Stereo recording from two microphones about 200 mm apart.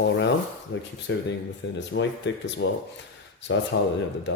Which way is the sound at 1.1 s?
65° left (ahead or behind).